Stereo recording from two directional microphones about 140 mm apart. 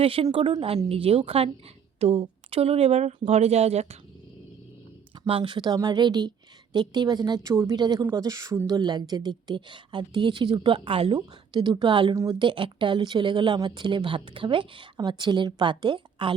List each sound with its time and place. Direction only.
0.0 s speech: 40° right (ahead or behind)
5.2 s a woman's voice: 35° right (ahead or behind)